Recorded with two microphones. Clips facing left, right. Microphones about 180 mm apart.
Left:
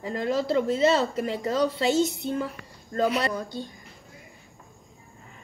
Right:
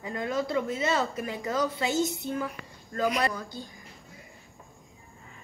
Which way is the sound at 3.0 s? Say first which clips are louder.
Left 3 dB; 30° left (ahead or behind).